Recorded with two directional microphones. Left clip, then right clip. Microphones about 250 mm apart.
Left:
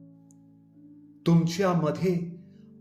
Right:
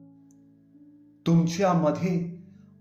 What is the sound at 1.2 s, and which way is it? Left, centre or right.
Speech, left.